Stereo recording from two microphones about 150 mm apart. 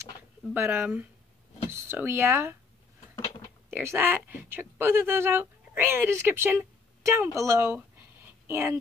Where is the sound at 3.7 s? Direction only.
15° right (ahead or behind).